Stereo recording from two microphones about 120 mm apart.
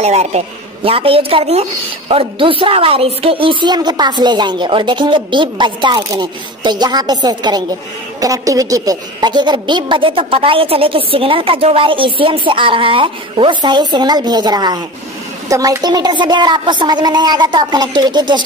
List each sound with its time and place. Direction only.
0.0 s a man's voice: 65° right (ahead or behind)
0.8 s a woman's voice: 50° right (ahead or behind)